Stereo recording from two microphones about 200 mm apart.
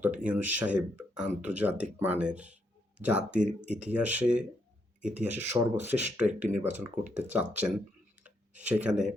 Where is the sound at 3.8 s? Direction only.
5° right (ahead or behind).